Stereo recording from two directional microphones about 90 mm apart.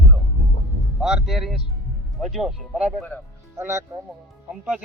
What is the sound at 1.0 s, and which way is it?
A man's voice, 5° right (ahead or behind).